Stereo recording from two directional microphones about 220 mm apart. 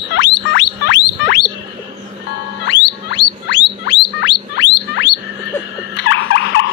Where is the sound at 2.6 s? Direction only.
50° left (ahead or behind).